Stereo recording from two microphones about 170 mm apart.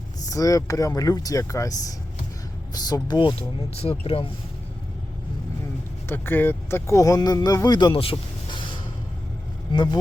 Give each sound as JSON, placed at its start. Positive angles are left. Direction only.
{"t": 0.3, "sound": "speech", "side_deg": 20}
{"t": 6.1, "sound": "speech", "side_deg": 10}